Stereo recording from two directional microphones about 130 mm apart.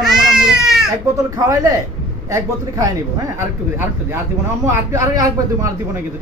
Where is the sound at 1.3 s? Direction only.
25° right (ahead or behind).